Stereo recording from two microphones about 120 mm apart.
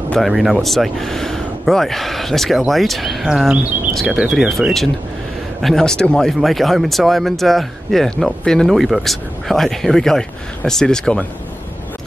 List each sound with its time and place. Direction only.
0.1 s speech: centre (ahead or behind)